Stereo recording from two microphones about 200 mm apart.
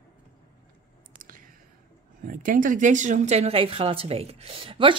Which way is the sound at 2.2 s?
45° right (ahead or behind).